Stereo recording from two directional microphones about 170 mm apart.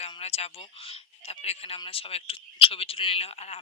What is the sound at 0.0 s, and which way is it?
Speech, 40° left (ahead or behind).